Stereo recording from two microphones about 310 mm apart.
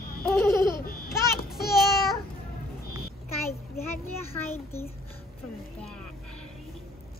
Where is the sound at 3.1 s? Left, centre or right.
Left.